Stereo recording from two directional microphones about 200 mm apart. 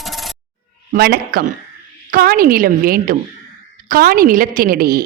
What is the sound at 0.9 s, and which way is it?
A woman's voice, 50° right (ahead or behind).